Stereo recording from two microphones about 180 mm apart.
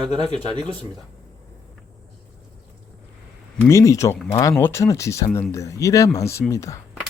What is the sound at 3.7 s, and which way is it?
Speech, 15° left (ahead or behind).